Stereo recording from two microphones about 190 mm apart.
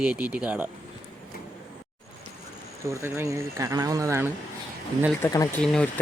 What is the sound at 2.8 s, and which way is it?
Speech, 15° right (ahead or behind).